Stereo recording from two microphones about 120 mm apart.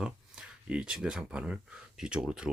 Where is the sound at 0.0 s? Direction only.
5° right (ahead or behind).